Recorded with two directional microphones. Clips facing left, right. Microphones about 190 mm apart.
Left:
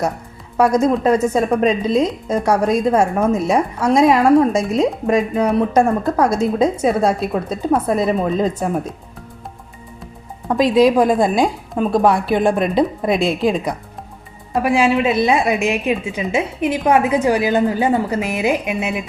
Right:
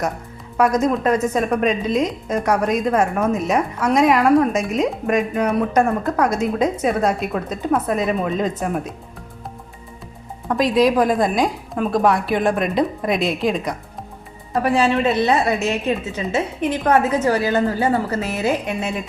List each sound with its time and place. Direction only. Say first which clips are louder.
0.5 s a woman's voice: left 3 dB; 30° left (ahead or behind)
10.8 s a woman's voice: left 3 dB; 25° left (ahead or behind)
14.5 s a woman's voice: left 2 dB; 10° left (ahead or behind)